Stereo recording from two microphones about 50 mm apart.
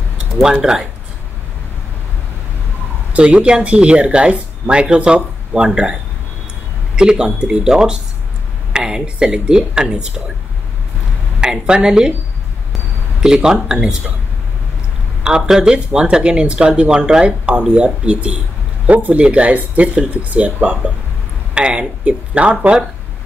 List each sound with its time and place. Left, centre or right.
0.4 s speech: centre
3.1 s speech: right
7.0 s speech: centre
11.4 s speech: centre
13.2 s speech: centre
15.2 s speech: centre